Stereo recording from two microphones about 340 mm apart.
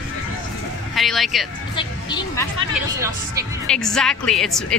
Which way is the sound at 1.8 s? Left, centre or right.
Centre.